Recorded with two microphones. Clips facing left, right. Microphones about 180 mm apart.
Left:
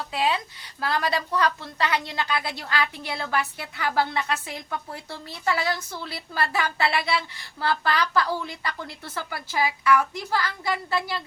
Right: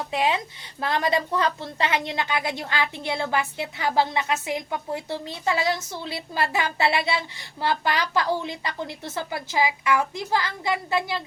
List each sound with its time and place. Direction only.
0.1 s a woman's voice: 20° right (ahead or behind)